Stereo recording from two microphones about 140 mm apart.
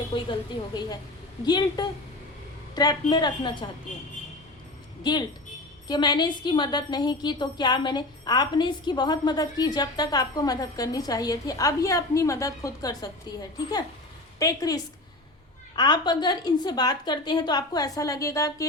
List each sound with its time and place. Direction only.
0.1 s a woman's voice: 30° left (ahead or behind)
5.1 s a woman's voice: 30° left (ahead or behind)
14.3 s a woman's voice: 25° left (ahead or behind)